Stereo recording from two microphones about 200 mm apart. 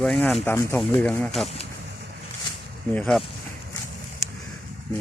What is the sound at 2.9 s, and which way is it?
Speech, centre (ahead or behind).